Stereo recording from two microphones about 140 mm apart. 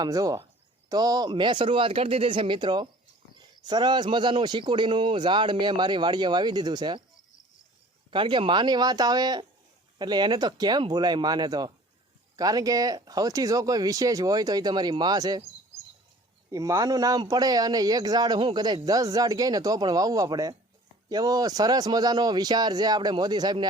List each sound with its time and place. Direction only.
0.0 s speech: 25° right (ahead or behind)
8.1 s speech: 35° right (ahead or behind)
16.5 s speech: 25° right (ahead or behind)